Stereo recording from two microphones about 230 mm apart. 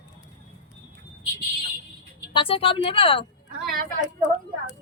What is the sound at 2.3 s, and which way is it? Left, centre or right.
Speech, left.